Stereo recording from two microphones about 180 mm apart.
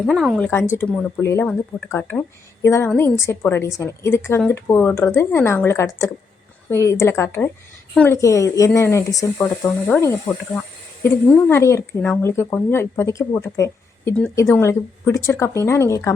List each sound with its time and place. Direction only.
0.0 s a woman's voice: centre (ahead or behind)